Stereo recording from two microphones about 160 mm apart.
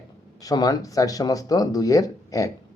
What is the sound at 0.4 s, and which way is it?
Speech, 25° left (ahead or behind).